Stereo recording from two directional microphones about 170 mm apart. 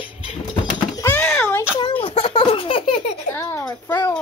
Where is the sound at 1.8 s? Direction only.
30° left (ahead or behind).